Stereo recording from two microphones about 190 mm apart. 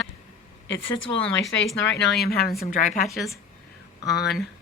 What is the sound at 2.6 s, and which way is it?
Speech, 45° left (ahead or behind).